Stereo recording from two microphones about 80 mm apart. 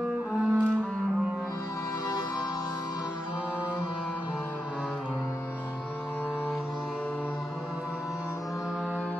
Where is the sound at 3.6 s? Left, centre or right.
Left.